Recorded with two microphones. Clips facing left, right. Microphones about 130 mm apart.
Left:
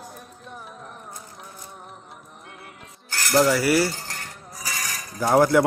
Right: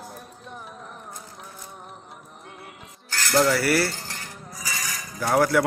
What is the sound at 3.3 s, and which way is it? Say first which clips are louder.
Cutlery: left 2 dB; 15° left (ahead or behind).